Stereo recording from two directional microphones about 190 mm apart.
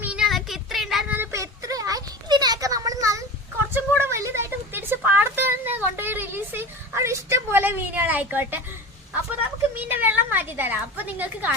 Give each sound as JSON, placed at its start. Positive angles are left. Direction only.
{"t": 0.0, "sound": "child singing", "side_deg": -5}
{"t": 1.2, "sound": "a sound", "side_deg": -15}
{"t": 9.7, "sound": "a woman's voice", "side_deg": -10}